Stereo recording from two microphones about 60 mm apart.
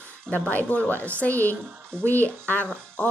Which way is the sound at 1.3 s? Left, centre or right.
Right.